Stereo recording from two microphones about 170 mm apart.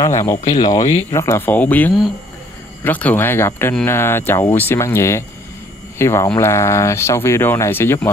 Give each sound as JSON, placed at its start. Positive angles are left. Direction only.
{"t": 0.3, "sound": "speech", "side_deg": 20}